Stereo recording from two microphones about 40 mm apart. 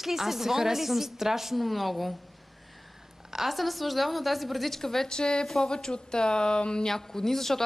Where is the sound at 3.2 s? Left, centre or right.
Centre; by 6.9 s left.